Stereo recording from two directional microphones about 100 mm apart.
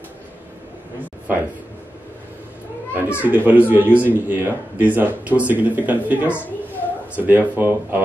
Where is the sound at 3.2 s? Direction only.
15° right (ahead or behind).